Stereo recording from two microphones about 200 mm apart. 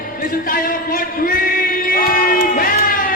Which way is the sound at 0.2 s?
45° left (ahead or behind).